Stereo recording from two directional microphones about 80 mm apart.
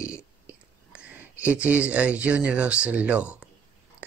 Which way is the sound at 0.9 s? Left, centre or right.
Centre.